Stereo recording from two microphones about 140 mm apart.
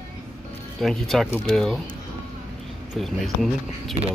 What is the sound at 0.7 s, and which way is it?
Speech, centre (ahead or behind).